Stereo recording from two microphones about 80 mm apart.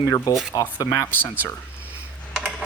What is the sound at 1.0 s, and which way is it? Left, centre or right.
Speech, left.